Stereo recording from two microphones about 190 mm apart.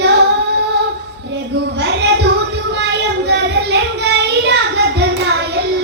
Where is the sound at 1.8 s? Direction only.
65° right (ahead or behind).